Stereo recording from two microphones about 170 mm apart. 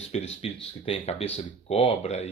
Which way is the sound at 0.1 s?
40° left (ahead or behind).